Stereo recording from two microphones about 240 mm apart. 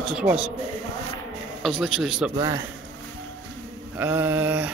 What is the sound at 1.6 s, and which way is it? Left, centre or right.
Speech, centre.